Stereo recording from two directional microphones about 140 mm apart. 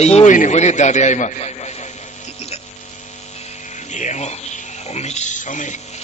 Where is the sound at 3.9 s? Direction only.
55° left (ahead or behind).